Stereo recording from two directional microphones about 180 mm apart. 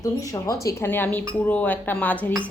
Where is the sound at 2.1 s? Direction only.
10° right (ahead or behind).